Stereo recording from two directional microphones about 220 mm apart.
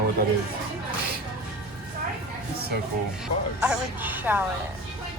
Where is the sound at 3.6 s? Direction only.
5° right (ahead or behind).